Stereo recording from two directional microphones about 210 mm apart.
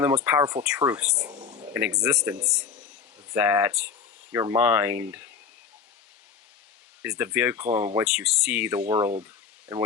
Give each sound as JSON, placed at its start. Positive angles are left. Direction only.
{"t": 0.0, "sound": "speech", "side_deg": -10}
{"t": 1.4, "sound": "a sound", "side_deg": -25}
{"t": 1.7, "sound": "speech", "side_deg": -15}
{"t": 7.0, "sound": "speech", "side_deg": -10}